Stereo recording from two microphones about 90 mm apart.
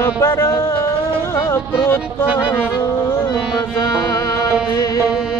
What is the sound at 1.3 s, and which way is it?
Music, 30° left (ahead or behind).